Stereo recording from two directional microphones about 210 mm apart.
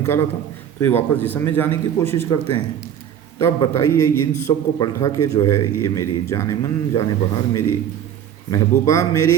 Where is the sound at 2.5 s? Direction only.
30° right (ahead or behind).